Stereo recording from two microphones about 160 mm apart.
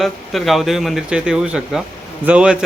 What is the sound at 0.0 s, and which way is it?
Speech, centre (ahead or behind).